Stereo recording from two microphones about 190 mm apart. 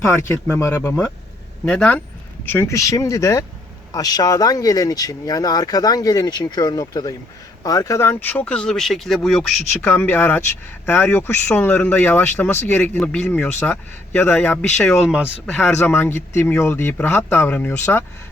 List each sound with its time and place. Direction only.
0.5 s speech: 10° left (ahead or behind)
9.8 s speech: 10° left (ahead or behind)
15.7 s speech: 10° left (ahead or behind)